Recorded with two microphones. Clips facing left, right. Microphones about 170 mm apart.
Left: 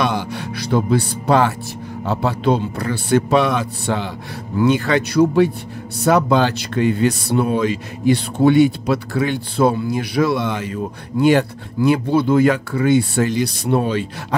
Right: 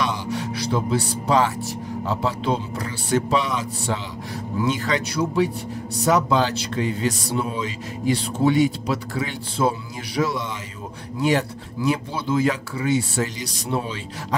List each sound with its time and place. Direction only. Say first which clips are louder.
0.0 s speech: left 4 dB; 65° left (ahead or behind)